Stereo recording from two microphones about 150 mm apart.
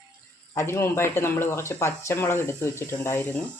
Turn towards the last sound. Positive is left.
turn(degrees=15)  # may be behind; listen again after turning